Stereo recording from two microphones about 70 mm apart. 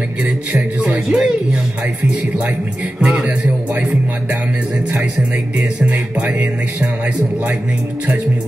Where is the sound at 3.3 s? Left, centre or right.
Right.